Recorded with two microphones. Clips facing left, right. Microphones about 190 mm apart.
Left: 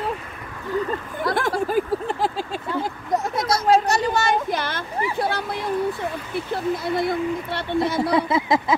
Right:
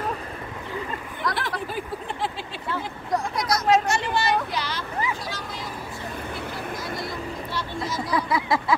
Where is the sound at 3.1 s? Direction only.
25° left (ahead or behind); by 5.7 s 60° left (ahead or behind).